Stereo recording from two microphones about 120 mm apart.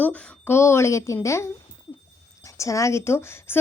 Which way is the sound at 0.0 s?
15° left (ahead or behind).